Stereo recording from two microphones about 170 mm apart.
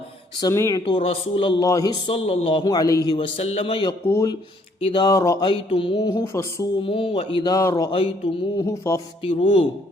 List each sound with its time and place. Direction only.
0.3 s speech: 20° left (ahead or behind)
0.9 s speech: 30° left (ahead or behind)
1.6 s speech: 20° left (ahead or behind)
2.1 s speech: 35° left (ahead or behind); by 3.2 s 20° left (ahead or behind)
3.2 s speech: 35° left (ahead or behind)
4.0 s speech: 15° left (ahead or behind)
4.8 s speech: 30° left (ahead or behind)
6.8 s speech: 30° left (ahead or behind)
9.2 s speech: 30° left (ahead or behind)